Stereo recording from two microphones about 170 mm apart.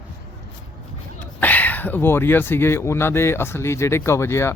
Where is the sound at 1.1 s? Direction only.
10° left (ahead or behind).